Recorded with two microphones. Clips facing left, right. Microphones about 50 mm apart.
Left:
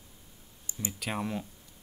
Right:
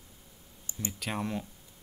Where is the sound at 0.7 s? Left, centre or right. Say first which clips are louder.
Even; right.